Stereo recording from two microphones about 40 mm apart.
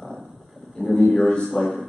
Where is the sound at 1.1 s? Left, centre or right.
Left.